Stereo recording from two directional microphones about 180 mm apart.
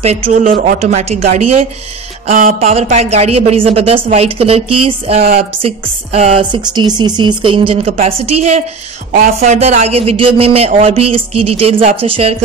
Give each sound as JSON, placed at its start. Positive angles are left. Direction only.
{"t": 0.0, "sound": "speech", "side_deg": -40}
{"t": 2.3, "sound": "a sound", "side_deg": -50}
{"t": 2.7, "sound": "speech", "side_deg": -40}